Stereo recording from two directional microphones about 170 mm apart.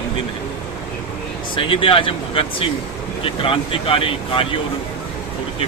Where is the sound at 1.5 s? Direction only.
30° left (ahead or behind).